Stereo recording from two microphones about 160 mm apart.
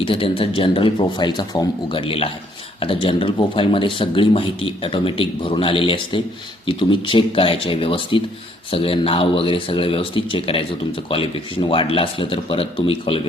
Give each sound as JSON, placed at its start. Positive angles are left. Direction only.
{"t": 0.0, "sound": "speech", "side_deg": 35}